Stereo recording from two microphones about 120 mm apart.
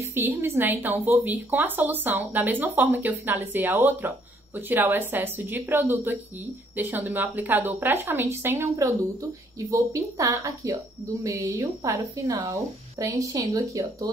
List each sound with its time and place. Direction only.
0.0 s speech: 20° right (ahead or behind)
11.9 s a woman's voice: 40° right (ahead or behind)
13.0 s a woman's voice: 30° right (ahead or behind)